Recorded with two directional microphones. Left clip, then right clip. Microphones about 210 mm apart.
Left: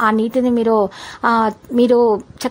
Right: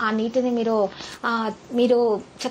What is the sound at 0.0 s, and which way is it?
A woman's voice, 40° left (ahead or behind).